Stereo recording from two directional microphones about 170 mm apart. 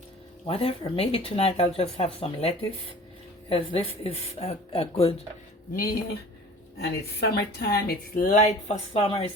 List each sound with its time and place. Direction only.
0.4 s speech: 35° left (ahead or behind)
6.7 s a woman's voice: 75° left (ahead or behind); by 9.3 s 30° left (ahead or behind)